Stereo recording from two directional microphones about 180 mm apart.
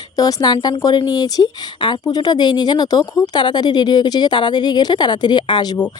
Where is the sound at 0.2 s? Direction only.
20° left (ahead or behind).